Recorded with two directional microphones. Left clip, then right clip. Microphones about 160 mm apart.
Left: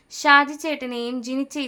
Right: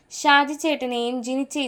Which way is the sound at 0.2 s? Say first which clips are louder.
Left 2 dB; centre (ahead or behind).